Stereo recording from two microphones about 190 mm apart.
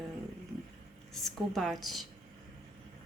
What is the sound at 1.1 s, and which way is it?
Speech, centre (ahead or behind).